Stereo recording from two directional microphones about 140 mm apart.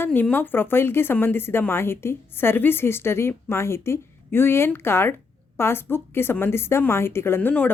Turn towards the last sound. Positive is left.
turn(degrees=10)  # may be behind; listen again after turning